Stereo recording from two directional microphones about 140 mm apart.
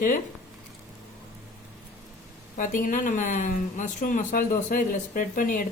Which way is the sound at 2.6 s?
70° left (ahead or behind).